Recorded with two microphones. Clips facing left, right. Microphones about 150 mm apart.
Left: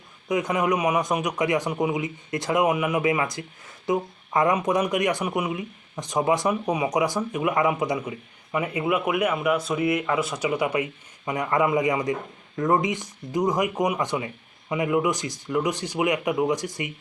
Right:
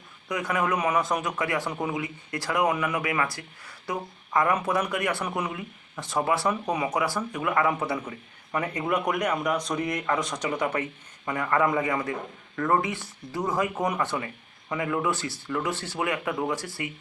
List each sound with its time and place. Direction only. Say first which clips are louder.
0.3 s a man's voice: left 4 dB; 20° left (ahead or behind)